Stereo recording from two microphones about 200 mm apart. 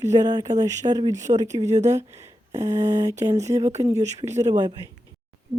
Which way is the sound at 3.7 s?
35° right (ahead or behind).